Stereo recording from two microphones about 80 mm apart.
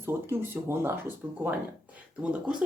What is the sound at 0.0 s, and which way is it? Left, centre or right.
Speech, right.